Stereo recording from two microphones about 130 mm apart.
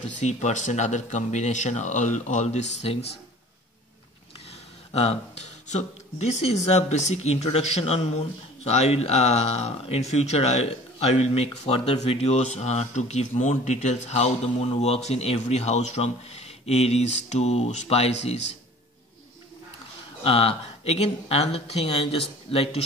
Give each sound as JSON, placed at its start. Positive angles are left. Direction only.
{"t": 0.2, "sound": "speech", "side_deg": 60}
{"t": 4.9, "sound": "speech", "side_deg": 55}
{"t": 20.2, "sound": "speech", "side_deg": 45}